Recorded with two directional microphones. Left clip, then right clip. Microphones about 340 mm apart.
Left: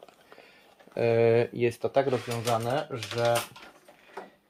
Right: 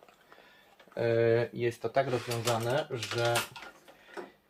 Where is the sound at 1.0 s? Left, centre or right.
Left.